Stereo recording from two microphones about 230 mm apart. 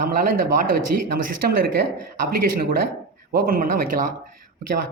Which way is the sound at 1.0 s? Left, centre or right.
Right.